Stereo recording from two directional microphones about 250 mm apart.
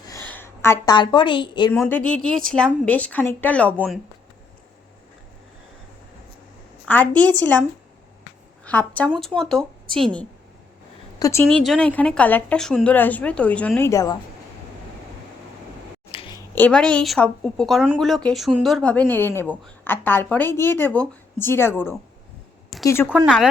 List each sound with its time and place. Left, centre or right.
0.3 s a woman's voice: centre
1.7 s a woman's voice: centre
6.8 s speech: centre
8.6 s a woman's voice: centre
11.2 s a woman's voice: centre
16.1 s a sound: centre
16.6 s a woman's voice: centre
22.7 s a sound: centre
23.0 s a woman's voice: centre